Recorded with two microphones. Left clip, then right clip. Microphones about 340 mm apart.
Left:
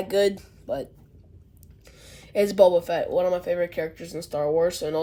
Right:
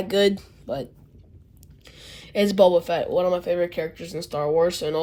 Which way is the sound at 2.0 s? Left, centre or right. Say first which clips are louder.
Even; right.